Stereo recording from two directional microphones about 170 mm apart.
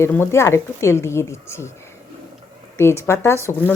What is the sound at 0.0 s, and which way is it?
Speech, 15° left (ahead or behind).